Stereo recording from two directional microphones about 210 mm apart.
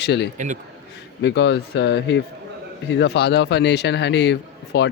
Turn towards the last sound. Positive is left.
turn(degrees=55)  # may be behind; listen again after turning